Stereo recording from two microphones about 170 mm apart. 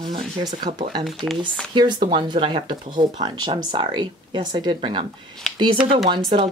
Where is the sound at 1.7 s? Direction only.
25° right (ahead or behind).